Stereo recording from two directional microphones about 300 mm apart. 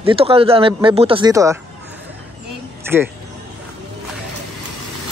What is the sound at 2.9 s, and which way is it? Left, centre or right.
Speech, centre.